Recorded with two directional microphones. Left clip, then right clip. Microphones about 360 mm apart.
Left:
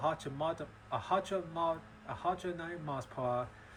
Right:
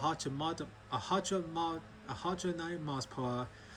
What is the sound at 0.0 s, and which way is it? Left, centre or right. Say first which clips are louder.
Speech: left 1 dB; centre.